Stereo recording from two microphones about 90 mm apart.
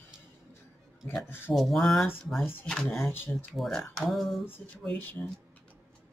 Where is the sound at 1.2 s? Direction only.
25° left (ahead or behind).